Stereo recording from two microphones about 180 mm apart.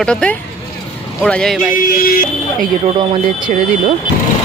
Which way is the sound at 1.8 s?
55° left (ahead or behind).